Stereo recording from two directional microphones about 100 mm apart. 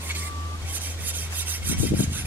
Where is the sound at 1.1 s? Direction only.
15° right (ahead or behind).